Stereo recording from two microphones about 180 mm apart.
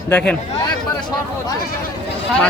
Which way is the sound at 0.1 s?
10° left (ahead or behind).